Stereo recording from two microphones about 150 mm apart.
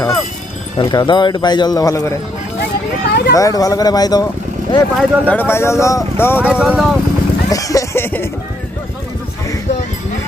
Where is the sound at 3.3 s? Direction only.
25° left (ahead or behind).